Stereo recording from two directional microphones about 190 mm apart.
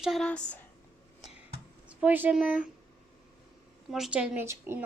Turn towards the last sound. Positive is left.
turn(degrees=-10)  # may be behind; listen again after turning